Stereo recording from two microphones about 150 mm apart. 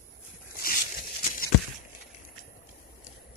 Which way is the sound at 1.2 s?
65° left (ahead or behind).